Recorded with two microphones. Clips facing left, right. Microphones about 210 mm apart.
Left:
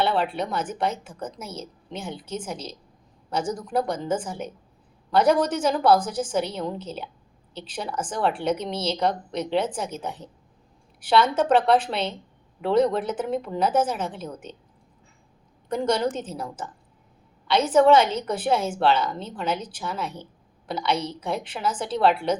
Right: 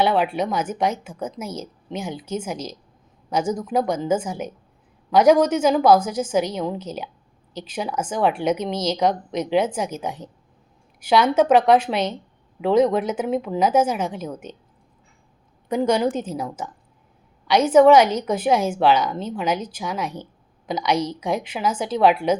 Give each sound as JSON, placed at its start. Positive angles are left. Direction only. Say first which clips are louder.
{"t": 0.0, "sound": "a woman's voice", "louder": "right 4 dB", "side_deg": -10}
{"t": 3.9, "sound": "a woman's voice", "louder": "right 5 dB", "side_deg": -10}
{"t": 15.7, "sound": "a woman's voice", "louder": "right 4 dB", "side_deg": -10}